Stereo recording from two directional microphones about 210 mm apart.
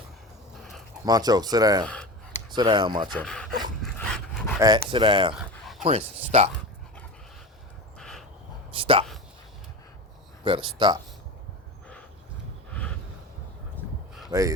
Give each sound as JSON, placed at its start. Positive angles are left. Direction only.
{"t": 1.0, "sound": "speech", "side_deg": -20}
{"t": 3.2, "sound": "speech", "side_deg": 5}
{"t": 3.9, "sound": "dog", "side_deg": 5}
{"t": 4.6, "sound": "speech", "side_deg": -20}
{"t": 5.3, "sound": "a sound", "side_deg": 0}
{"t": 5.8, "sound": "speech", "side_deg": -30}
{"t": 7.9, "sound": "dog", "side_deg": 5}
{"t": 8.7, "sound": "a sound", "side_deg": -25}
{"t": 10.4, "sound": "speech", "side_deg": -25}
{"t": 14.3, "sound": "speech", "side_deg": -15}